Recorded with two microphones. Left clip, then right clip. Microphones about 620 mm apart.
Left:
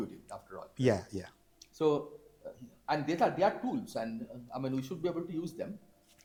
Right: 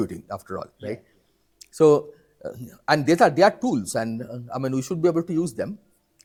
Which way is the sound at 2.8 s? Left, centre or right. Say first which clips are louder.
Right 13 dB; right.